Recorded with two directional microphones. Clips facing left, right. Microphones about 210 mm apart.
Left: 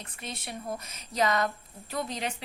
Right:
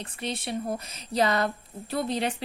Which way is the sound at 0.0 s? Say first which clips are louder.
Right 7 dB; 30° right (ahead or behind).